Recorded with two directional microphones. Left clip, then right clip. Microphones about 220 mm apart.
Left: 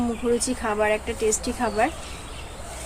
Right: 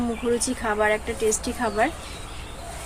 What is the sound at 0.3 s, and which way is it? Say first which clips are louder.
Speech: even; 5° left (ahead or behind).